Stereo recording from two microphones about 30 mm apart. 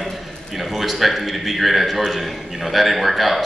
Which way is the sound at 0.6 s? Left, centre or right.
Centre.